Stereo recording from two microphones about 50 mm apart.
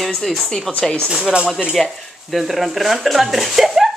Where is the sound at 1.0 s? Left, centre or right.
Centre.